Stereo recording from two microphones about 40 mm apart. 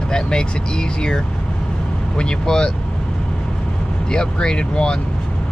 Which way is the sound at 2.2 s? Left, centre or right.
Left.